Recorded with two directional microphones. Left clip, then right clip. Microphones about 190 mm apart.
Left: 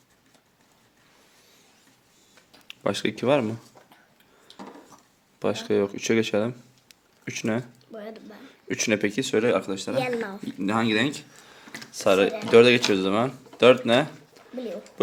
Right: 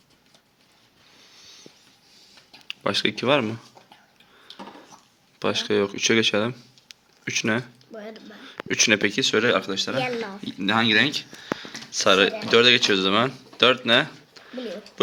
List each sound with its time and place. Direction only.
2.6 s speech: 10° left (ahead or behind)
5.4 s speech: 5° left (ahead or behind)
7.9 s a sound: 25° left (ahead or behind)
8.4 s speech: 5° left (ahead or behind)
10.0 s speech: 45° left (ahead or behind)
10.6 s speech: 10° left (ahead or behind)